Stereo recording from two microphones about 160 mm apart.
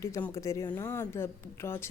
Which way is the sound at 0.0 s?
20° left (ahead or behind).